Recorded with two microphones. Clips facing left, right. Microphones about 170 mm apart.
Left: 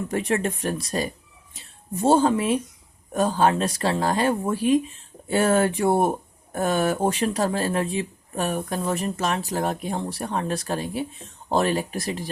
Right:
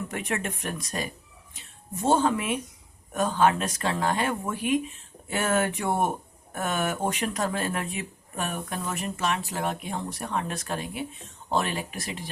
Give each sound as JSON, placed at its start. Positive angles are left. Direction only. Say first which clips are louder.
{"t": 0.1, "sound": "speech", "louder": "left 7 dB", "side_deg": 35}